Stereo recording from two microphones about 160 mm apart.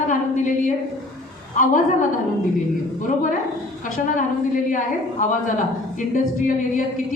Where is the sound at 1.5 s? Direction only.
55° left (ahead or behind).